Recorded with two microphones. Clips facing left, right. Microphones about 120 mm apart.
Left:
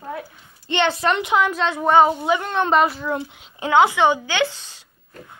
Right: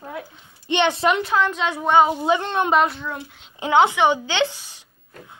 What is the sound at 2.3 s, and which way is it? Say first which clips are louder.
Speech: even; 25° right (ahead or behind).